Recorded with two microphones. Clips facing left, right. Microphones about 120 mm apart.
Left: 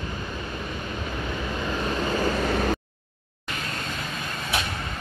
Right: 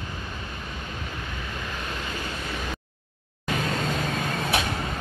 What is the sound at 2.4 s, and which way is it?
Vehicle, 65° left (ahead or behind).